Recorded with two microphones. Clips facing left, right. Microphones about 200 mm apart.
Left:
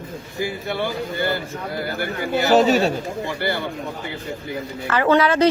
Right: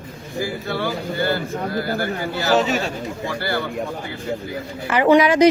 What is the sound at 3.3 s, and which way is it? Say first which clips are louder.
Speech: left 1 dB; 20° left (ahead or behind).